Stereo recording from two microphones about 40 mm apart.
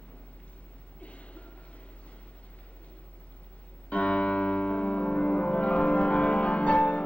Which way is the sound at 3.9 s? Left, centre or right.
Left.